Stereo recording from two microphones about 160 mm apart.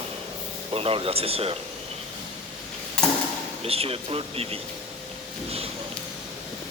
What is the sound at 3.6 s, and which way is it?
Speech, 40° right (ahead or behind).